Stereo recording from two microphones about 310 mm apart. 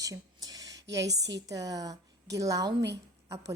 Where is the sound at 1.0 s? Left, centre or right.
Right.